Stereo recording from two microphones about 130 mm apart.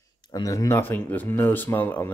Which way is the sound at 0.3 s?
25° left (ahead or behind).